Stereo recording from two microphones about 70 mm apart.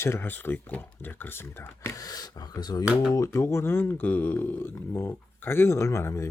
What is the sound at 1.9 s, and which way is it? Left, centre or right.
Speech, left.